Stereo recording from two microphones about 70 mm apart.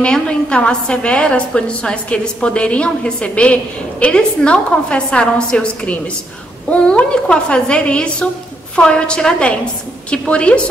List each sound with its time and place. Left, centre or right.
0.0 s a woman's voice: centre